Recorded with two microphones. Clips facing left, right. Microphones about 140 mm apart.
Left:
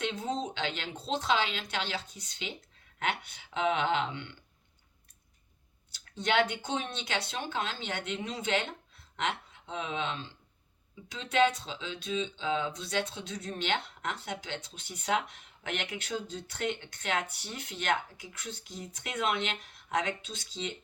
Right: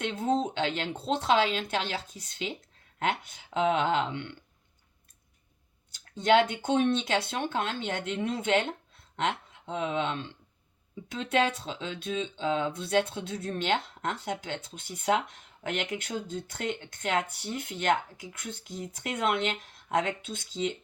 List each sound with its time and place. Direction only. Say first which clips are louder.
0.0 s speech: right 5 dB; 50° right (ahead or behind)
5.9 s speech: right 7 dB; 45° right (ahead or behind)